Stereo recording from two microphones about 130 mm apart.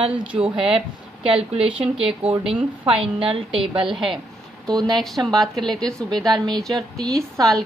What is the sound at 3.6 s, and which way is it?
A woman's voice, 5° right (ahead or behind).